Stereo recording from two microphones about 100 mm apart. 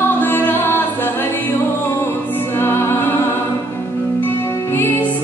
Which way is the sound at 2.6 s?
25° left (ahead or behind).